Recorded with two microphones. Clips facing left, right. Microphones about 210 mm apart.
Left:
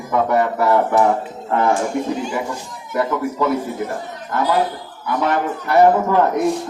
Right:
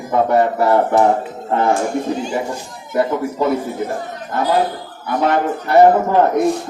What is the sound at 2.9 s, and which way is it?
Speech, 30° right (ahead or behind).